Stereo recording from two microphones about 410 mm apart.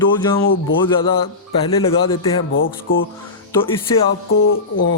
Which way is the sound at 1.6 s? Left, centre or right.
Centre.